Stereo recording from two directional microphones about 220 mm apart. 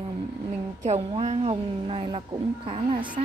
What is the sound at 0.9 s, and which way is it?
A woman's voice, 25° right (ahead or behind).